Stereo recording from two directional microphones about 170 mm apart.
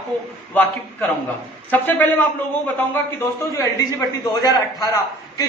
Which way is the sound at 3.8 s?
20° left (ahead or behind).